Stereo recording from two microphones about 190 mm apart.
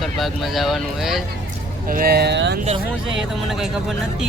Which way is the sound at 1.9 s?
55° right (ahead or behind).